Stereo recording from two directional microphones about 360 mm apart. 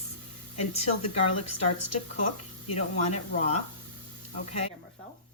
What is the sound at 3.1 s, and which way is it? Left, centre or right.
Speech, centre.